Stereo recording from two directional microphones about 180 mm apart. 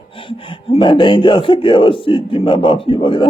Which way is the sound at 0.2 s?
30° left (ahead or behind).